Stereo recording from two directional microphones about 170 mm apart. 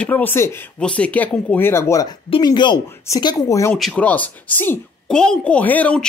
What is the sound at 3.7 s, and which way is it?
Speech, 5° left (ahead or behind).